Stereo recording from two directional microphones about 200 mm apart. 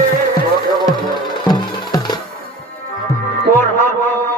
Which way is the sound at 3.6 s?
10° left (ahead or behind).